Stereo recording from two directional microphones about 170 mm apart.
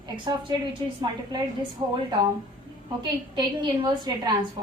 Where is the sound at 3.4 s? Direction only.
25° right (ahead or behind).